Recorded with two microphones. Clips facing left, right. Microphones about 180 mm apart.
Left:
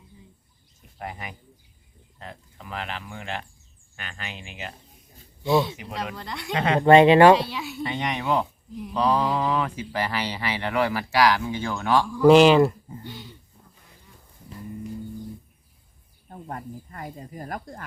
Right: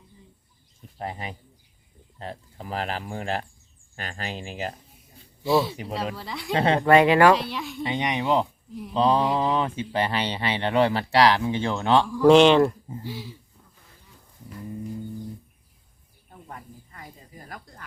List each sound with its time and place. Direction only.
0.9 s speech: 30° right (ahead or behind)
5.4 s speech: centre (ahead or behind)
6.5 s speech: 30° right (ahead or behind)
6.8 s speech: 25° left (ahead or behind)
7.5 s speech: 5° left (ahead or behind)
7.9 s speech: 15° right (ahead or behind)
12.1 s speech: 5° left (ahead or behind)
16.3 s speech: 50° left (ahead or behind)